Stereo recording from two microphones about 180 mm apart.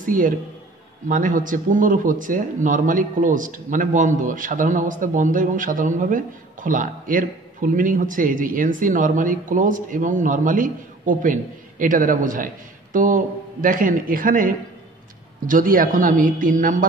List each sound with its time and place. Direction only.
0.0 s a man's voice: 50° right (ahead or behind)